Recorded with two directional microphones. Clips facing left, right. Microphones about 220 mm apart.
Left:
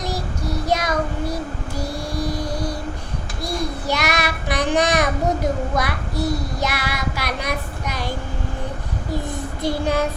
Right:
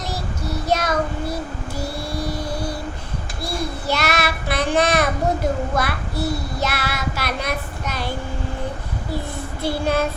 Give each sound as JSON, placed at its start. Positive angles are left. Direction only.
{"t": 0.0, "sound": "child singing", "side_deg": 15}
{"t": 2.2, "sound": "vehicle", "side_deg": 15}
{"t": 3.4, "sound": "child singing", "side_deg": 15}
{"t": 9.6, "sound": "child singing", "side_deg": 15}